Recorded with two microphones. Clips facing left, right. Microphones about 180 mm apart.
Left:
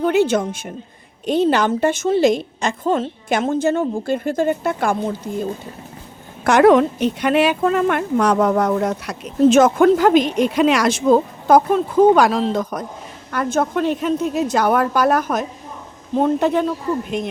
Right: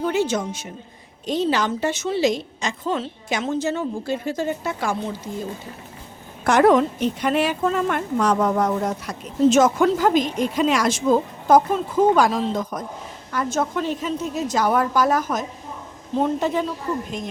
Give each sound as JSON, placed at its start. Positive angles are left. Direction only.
{"t": 0.0, "sound": "a woman's voice", "side_deg": 60}
{"t": 6.4, "sound": "a woman's voice", "side_deg": 70}
{"t": 13.3, "sound": "a woman's voice", "side_deg": 60}